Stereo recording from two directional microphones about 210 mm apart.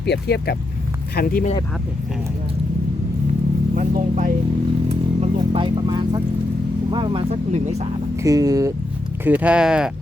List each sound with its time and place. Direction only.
0.0 s speech: 50° left (ahead or behind)
3.8 s speech: 35° right (ahead or behind)
4.9 s vehicle: 25° right (ahead or behind)
6.9 s speech: 25° right (ahead or behind)
8.1 s speech: 15° right (ahead or behind)